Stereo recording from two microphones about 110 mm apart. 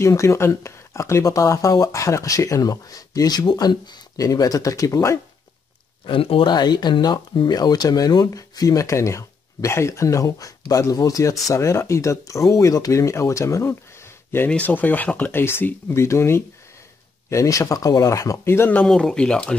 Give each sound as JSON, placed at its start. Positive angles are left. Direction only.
{"t": 0.0, "sound": "speech", "side_deg": 25}
{"t": 6.0, "sound": "speech", "side_deg": 55}
{"t": 6.5, "sound": "speech", "side_deg": 40}
{"t": 18.9, "sound": "speech", "side_deg": 5}